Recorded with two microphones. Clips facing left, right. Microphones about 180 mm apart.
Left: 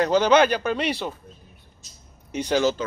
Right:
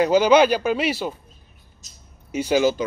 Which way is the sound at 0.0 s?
10° right (ahead or behind).